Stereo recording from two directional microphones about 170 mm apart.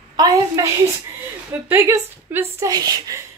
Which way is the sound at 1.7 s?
15° right (ahead or behind).